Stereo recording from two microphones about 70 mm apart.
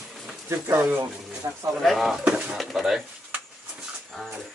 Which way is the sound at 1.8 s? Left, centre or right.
Centre.